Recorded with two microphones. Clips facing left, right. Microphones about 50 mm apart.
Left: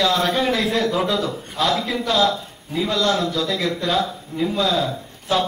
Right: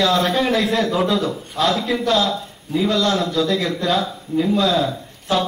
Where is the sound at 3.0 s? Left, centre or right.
Centre.